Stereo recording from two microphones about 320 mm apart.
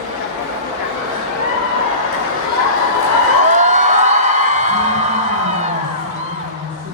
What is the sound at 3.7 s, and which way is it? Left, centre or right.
Music, right.